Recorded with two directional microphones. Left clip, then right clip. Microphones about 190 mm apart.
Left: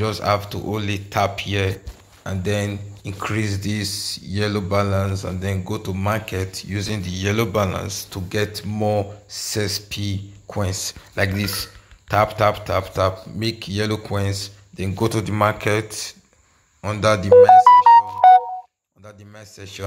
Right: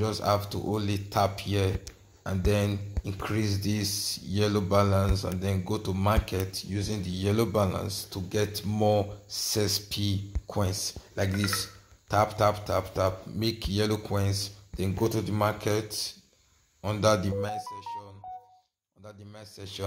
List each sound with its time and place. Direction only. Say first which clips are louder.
0.0 s speech: left 6 dB; 5° left (ahead or behind)
3.2 s speech: left 7 dB; 10° left (ahead or behind); by 6.3 s 10° right (ahead or behind)
6.3 s speech: left 5 dB; 10° left (ahead or behind)
7.0 s speech: left 5 dB; 5° right (ahead or behind)
8.1 s speech: left 6 dB; 10° left (ahead or behind)
8.5 s speech: left 1 dB; 10° right (ahead or behind)
10.7 s speech: left 6 dB; 20° left (ahead or behind)
13.4 s speech: left 4 dB; 5° right (ahead or behind)
15.0 s speech: left 8 dB; 25° left (ahead or behind)
16.8 s speech: left 6 dB; 5° left (ahead or behind)
19.0 s speech: left 5 dB; centre (ahead or behind)